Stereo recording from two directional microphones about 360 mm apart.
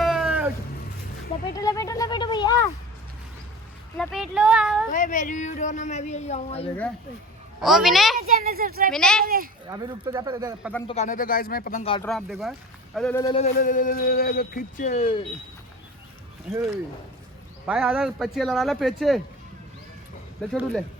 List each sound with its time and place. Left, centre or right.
0.0 s cat: centre
1.5 s a sound: centre
3.9 s a sound: centre
4.9 s speech: left
7.6 s speech: centre
8.3 s speech: right
8.9 s speech: centre
9.2 s speech: right
9.6 s speech: centre
10.8 s speech: centre
12.0 s speech: centre
17.7 s speech: centre
20.5 s speech: centre